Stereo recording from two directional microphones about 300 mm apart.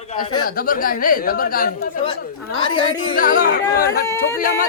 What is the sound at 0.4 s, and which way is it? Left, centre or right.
Speech, left.